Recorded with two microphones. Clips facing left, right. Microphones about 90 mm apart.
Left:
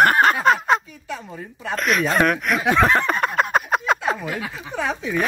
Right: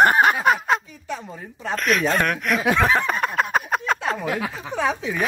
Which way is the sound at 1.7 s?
Centre (ahead or behind).